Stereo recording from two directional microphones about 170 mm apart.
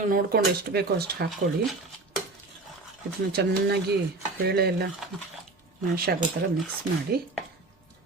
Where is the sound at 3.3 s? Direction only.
70° right (ahead or behind).